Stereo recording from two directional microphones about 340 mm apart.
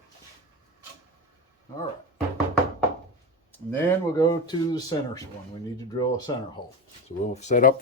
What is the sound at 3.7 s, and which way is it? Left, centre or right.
Speech, centre.